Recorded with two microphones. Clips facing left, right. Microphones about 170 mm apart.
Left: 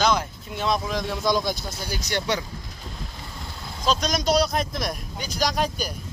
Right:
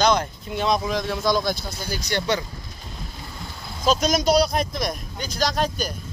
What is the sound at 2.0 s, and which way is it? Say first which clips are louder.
Speech: right 2 dB; 15° left (ahead or behind).